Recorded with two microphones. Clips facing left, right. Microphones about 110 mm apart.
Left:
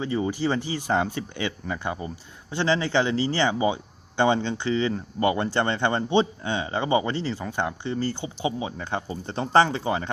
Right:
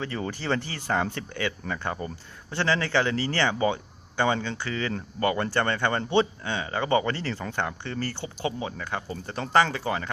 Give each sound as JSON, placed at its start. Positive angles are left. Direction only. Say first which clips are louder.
{"t": 0.0, "sound": "speech", "louder": "left 6 dB", "side_deg": 15}